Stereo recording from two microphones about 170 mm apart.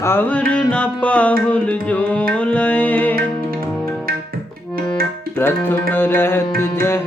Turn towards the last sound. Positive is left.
turn(degrees=15)  # may be behind; listen again after turning